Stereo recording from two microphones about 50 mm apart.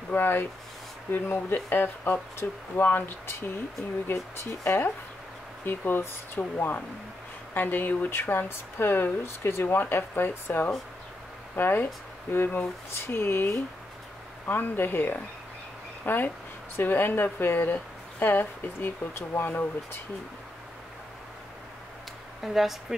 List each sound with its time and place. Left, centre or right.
0.1 s speech: left
8.1 s speech: left
22.4 s speech: centre